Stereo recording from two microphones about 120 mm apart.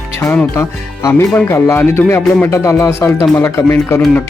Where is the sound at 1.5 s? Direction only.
20° left (ahead or behind).